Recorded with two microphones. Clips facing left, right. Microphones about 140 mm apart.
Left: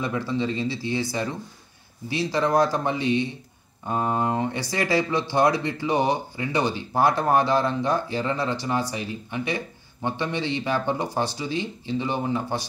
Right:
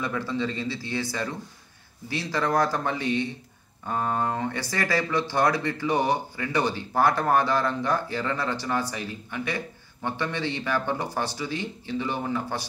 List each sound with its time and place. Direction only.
0.0 s speech: 20° left (ahead or behind)